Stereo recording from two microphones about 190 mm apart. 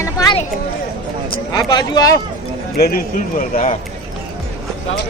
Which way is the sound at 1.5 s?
20° left (ahead or behind).